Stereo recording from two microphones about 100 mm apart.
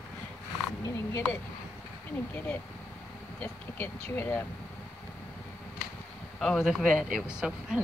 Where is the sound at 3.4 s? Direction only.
20° left (ahead or behind).